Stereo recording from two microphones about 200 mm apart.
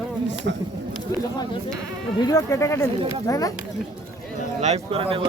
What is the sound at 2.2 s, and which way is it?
Speech, 15° left (ahead or behind).